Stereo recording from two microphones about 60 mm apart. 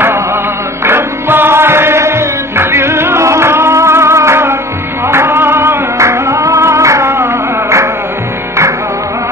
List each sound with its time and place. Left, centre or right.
0.8 s music: right
5.9 s music: right